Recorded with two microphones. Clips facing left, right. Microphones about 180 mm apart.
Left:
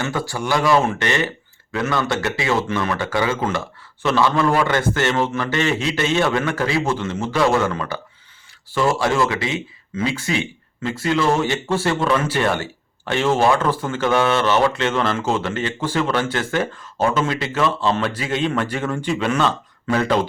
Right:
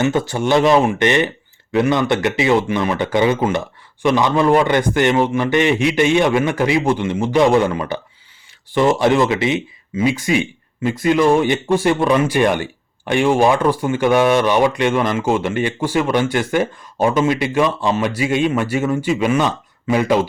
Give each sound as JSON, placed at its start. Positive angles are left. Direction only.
{"t": 0.0, "sound": "speech", "side_deg": -20}